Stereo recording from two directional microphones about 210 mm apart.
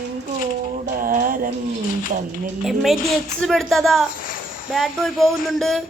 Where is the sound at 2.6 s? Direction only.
Centre (ahead or behind).